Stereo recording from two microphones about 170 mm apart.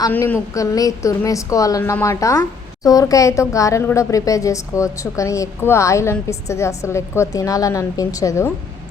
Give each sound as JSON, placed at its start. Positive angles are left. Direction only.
{"t": 0.1, "sound": "a woman's voice", "side_deg": 10}